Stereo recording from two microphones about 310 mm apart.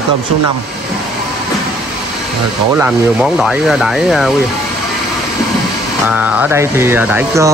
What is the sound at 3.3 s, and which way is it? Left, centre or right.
Speech, centre.